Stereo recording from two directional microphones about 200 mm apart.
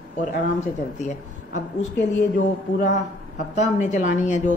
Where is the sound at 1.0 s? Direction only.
35° left (ahead or behind).